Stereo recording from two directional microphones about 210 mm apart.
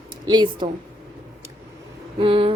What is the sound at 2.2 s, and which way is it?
Speech, 25° right (ahead or behind).